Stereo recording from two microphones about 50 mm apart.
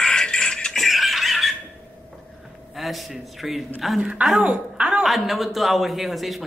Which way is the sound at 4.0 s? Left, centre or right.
Right.